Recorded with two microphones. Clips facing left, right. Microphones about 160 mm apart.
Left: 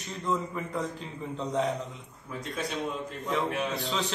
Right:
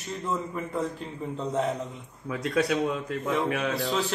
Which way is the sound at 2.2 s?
75° right (ahead or behind).